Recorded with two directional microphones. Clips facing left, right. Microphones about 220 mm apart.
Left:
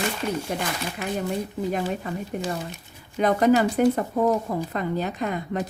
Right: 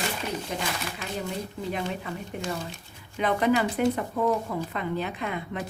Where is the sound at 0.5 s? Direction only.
50° left (ahead or behind).